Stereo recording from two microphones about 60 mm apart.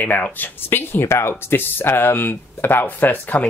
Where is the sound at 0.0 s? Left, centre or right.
Left.